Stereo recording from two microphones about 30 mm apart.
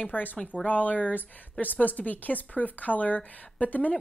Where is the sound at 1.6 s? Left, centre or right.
Left.